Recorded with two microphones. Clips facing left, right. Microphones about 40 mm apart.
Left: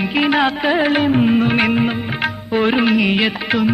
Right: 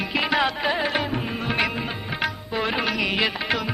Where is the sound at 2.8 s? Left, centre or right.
Left.